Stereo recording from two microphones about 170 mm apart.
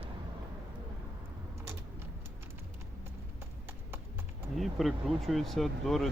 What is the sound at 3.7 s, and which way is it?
Clip-clop, 15° right (ahead or behind).